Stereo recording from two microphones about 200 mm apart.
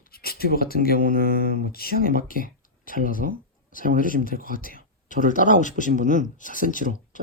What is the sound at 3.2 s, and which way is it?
Speech, 45° right (ahead or behind).